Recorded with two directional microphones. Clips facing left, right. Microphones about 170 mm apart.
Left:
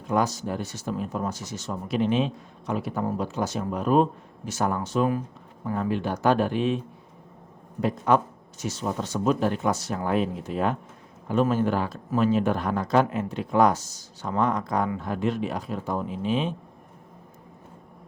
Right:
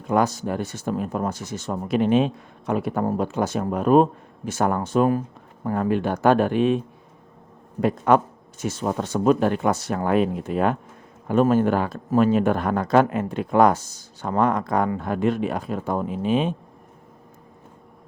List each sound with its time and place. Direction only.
0.1 s speech: 55° right (ahead or behind)
7.8 s speech: 55° right (ahead or behind)